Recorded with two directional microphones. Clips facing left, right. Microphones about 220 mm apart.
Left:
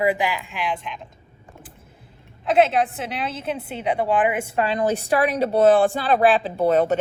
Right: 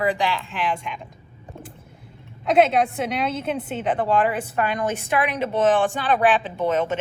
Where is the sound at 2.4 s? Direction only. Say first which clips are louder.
Even; centre (ahead or behind).